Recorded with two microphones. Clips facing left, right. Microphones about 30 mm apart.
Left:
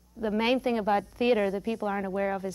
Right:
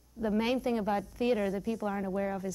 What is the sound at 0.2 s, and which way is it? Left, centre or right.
A woman's voice, left.